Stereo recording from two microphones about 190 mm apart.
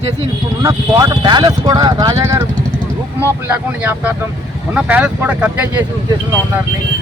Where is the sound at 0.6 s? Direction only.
20° right (ahead or behind).